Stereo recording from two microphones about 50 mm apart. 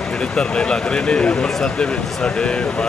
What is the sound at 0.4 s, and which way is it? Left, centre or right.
Speech, centre.